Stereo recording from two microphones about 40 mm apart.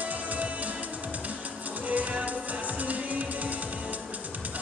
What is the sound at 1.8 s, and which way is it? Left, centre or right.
Music, right.